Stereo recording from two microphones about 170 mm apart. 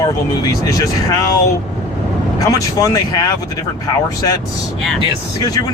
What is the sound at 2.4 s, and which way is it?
Speech, 20° left (ahead or behind).